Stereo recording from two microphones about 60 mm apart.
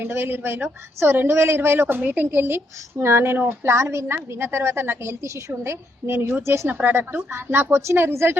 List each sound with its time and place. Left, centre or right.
0.0 s a woman's voice: right
2.0 s a woman's voice: right
2.3 s a woman's voice: right
6.7 s a woman's voice: right